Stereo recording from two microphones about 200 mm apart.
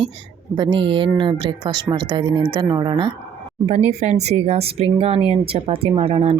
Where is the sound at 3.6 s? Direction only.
35° right (ahead or behind).